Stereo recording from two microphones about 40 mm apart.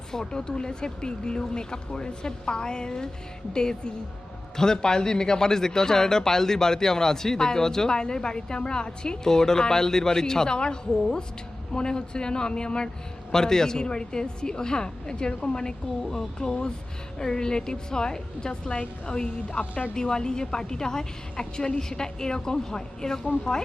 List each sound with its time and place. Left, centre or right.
0.1 s speech: centre
16.0 s speech: centre